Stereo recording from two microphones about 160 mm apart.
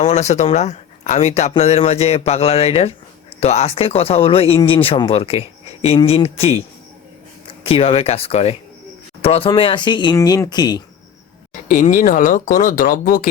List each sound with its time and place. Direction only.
0.0 s speech: 45° left (ahead or behind); by 10.8 s 25° left (ahead or behind)
11.7 s speech: 55° left (ahead or behind)